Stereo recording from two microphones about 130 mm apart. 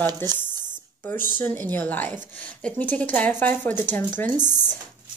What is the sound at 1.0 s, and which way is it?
Speech, 15° left (ahead or behind).